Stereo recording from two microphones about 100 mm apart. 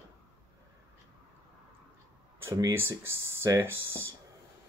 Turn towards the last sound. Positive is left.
turn(degrees=-25)  # may be behind; listen again after turning